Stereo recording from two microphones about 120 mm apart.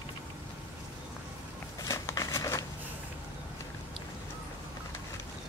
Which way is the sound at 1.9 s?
30° left (ahead or behind).